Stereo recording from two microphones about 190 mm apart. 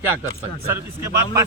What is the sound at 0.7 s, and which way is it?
Speech, 15° right (ahead or behind).